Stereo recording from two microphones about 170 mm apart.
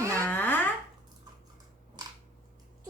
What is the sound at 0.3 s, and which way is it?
Babbling, 10° left (ahead or behind).